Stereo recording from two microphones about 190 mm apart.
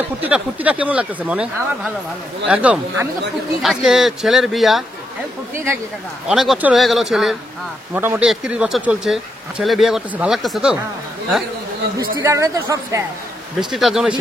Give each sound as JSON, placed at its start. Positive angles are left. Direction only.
{"t": 0.2, "sound": "speech", "side_deg": -10}
{"t": 6.2, "sound": "speech", "side_deg": 0}
{"t": 12.2, "sound": "speech", "side_deg": -15}
{"t": 13.6, "sound": "speech", "side_deg": 0}